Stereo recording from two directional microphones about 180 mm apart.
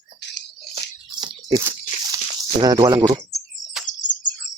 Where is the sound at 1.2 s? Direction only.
20° right (ahead or behind).